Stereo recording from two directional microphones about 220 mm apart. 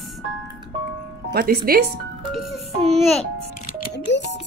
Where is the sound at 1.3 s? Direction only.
45° right (ahead or behind).